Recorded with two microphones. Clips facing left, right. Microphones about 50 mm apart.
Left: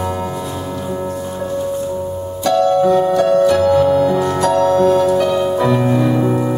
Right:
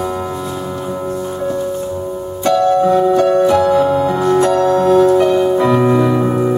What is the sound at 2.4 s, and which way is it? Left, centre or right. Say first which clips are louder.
Music: right 1 dB; right.